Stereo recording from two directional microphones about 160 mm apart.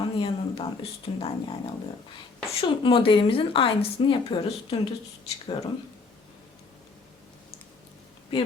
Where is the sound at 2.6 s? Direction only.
35° left (ahead or behind).